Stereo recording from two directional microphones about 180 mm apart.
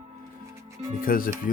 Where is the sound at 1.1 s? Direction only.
50° left (ahead or behind).